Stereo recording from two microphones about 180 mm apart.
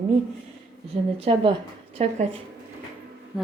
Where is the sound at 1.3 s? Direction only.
35° right (ahead or behind).